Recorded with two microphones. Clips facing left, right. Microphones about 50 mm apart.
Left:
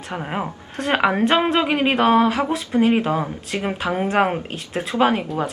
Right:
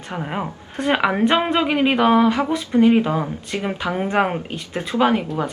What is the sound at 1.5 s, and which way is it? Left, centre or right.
Speech, centre.